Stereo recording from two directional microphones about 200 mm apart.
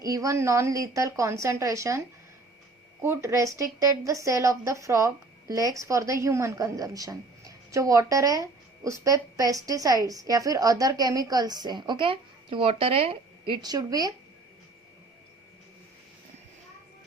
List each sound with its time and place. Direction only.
0.0 s speech: 15° right (ahead or behind)
3.0 s speech: 15° right (ahead or behind)